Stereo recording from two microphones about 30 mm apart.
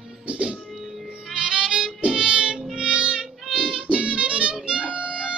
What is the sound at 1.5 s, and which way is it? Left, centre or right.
Music, right.